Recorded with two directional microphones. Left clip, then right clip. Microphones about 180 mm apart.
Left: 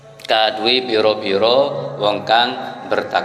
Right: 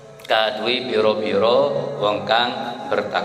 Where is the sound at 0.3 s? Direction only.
35° left (ahead or behind).